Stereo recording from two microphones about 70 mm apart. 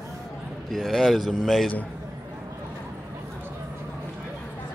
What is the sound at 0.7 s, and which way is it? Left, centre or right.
Speech, centre.